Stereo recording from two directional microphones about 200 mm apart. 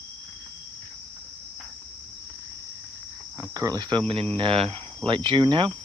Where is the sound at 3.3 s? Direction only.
20° right (ahead or behind).